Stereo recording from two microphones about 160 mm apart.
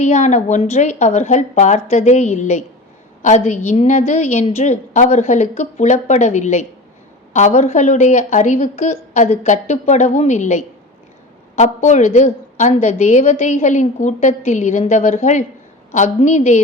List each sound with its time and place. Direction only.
0.0 s a woman's voice: 45° left (ahead or behind)